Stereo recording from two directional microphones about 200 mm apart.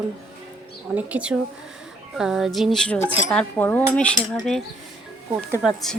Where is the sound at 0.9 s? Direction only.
5° right (ahead or behind).